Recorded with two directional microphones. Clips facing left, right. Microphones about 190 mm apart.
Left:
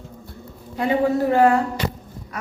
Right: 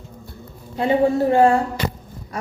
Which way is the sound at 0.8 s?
25° right (ahead or behind).